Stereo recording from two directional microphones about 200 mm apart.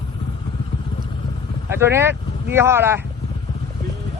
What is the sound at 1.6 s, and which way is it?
Speech, 10° right (ahead or behind).